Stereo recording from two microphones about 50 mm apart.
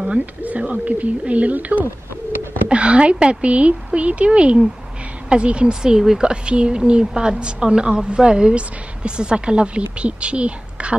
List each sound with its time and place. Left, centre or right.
0.4 s speech: right